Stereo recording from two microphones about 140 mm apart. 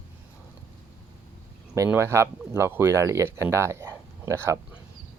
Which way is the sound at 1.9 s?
20° right (ahead or behind).